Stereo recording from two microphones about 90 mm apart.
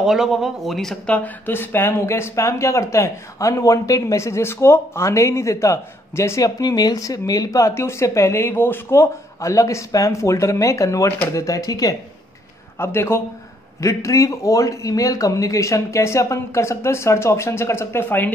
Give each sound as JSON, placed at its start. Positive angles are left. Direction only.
{"t": 0.0, "sound": "speech", "side_deg": -5}
{"t": 1.0, "sound": "speech", "side_deg": 15}
{"t": 12.7, "sound": "a man's voice", "side_deg": 25}